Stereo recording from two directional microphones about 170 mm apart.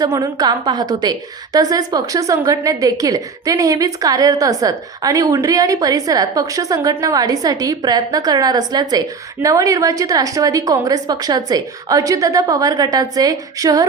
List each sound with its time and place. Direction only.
0.0 s a woman's voice: 20° right (ahead or behind)